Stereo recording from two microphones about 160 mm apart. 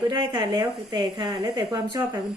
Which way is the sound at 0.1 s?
30° right (ahead or behind).